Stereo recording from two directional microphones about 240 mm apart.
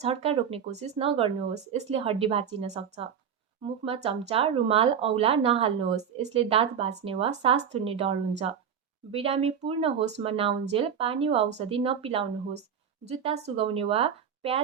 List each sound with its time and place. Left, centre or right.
0.0 s speech: right